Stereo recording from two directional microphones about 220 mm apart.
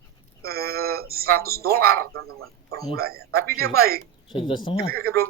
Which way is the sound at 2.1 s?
70° right (ahead or behind).